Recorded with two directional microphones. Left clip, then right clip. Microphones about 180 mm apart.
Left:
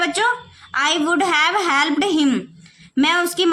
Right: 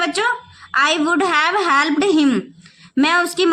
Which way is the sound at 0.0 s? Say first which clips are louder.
Even; 20° right (ahead or behind).